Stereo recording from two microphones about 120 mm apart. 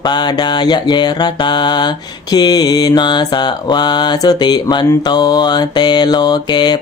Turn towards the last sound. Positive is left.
turn(degrees=35)  # may be behind; listen again after turning